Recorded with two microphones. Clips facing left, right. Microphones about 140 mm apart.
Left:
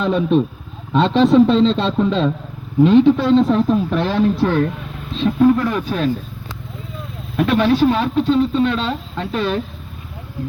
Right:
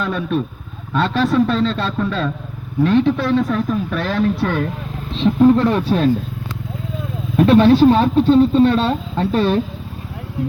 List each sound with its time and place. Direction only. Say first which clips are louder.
0.0 s a man's voice: left 5 dB; 25° left (ahead or behind)
5.1 s speech: right 2 dB; 25° right (ahead or behind)
7.3 s speech: right 4 dB; 30° right (ahead or behind)